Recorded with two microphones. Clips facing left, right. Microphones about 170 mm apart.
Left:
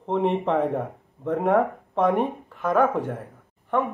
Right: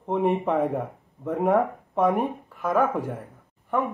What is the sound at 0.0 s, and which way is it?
Speech, 10° right (ahead or behind).